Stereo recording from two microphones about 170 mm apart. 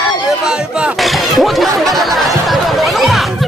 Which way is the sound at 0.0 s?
5° right (ahead or behind).